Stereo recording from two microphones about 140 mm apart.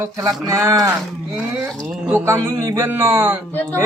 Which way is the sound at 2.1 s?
20° right (ahead or behind).